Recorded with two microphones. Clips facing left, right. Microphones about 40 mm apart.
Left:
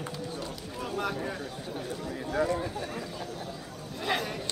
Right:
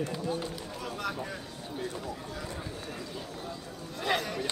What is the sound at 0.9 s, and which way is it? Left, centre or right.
Speech, centre.